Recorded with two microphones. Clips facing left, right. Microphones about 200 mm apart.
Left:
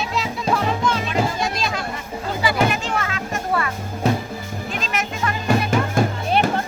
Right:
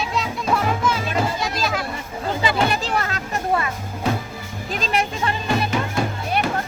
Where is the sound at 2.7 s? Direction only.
35° right (ahead or behind).